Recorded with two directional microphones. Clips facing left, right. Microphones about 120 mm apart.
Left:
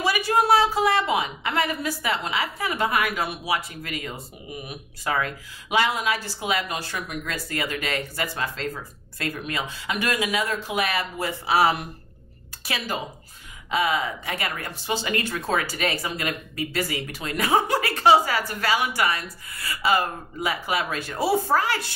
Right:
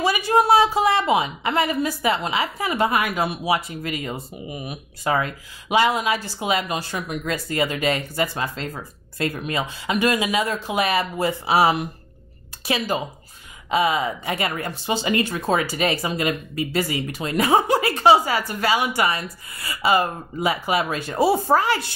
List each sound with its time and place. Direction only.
0.0 s speech: 20° right (ahead or behind)